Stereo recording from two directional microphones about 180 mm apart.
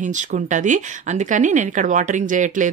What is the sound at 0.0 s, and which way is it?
Speech, 45° right (ahead or behind).